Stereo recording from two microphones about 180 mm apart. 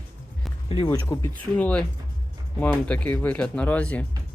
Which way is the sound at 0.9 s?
15° left (ahead or behind).